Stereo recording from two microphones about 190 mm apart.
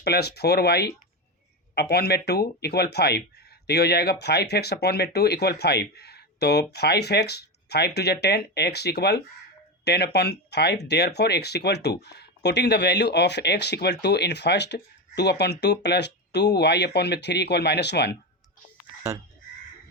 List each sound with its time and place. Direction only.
0.0 s speech: 60° left (ahead or behind)